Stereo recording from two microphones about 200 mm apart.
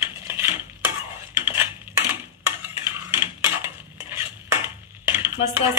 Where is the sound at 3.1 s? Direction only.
10° right (ahead or behind).